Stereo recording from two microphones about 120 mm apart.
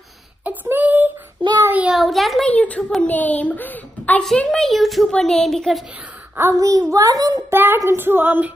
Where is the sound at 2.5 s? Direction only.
10° left (ahead or behind).